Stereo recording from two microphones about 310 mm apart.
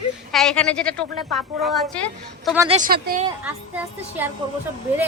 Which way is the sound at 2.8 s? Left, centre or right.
Right.